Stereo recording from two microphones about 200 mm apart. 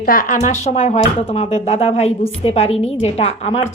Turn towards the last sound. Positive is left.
turn(degrees=30)  # may be behind; listen again after turning